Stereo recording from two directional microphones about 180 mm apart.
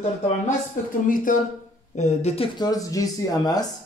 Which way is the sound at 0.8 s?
50° left (ahead or behind).